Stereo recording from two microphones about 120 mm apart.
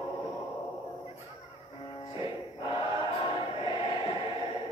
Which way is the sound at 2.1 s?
45° left (ahead or behind).